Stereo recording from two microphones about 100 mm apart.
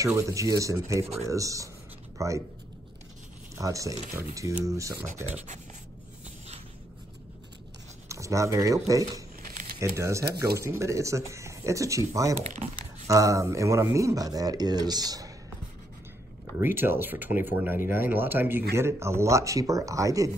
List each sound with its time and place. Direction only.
0.0 s speech: 30° right (ahead or behind)
3.5 s speech: 35° right (ahead or behind)
6.2 s a sound: 90° right
8.1 s speech: 30° right (ahead or behind)
16.5 s speech: 20° right (ahead or behind)